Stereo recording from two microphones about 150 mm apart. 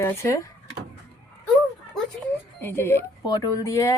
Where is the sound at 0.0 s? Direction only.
20° left (ahead or behind).